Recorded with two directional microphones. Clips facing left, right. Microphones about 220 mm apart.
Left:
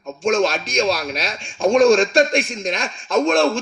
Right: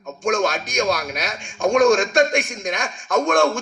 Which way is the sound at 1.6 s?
30° left (ahead or behind).